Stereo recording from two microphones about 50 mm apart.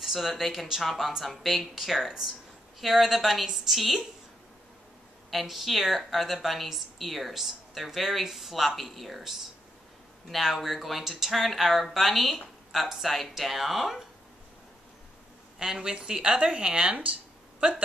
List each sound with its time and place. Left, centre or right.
0.0 s a woman's voice: centre
5.3 s a woman's voice: centre
15.6 s speech: centre